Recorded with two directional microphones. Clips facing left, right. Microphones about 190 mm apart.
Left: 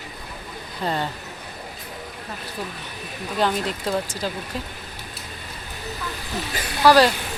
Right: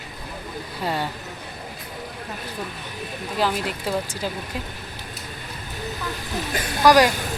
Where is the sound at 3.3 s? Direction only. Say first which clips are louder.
Left 1 dB; 5° right (ahead or behind).